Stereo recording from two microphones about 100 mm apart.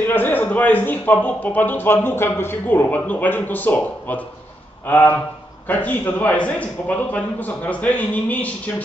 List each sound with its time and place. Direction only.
0.0 s a man's voice: 20° left (ahead or behind)